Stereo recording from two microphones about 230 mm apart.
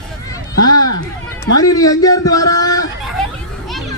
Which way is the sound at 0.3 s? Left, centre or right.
Centre.